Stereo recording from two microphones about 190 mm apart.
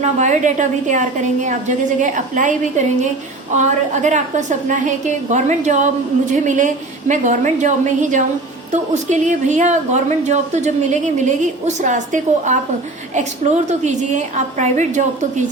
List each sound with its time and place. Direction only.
0.0 s a woman's voice: 40° right (ahead or behind)